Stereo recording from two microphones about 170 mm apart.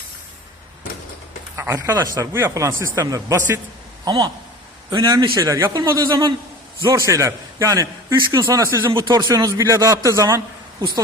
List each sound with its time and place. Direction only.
1.5 s a man's voice: 15° right (ahead or behind)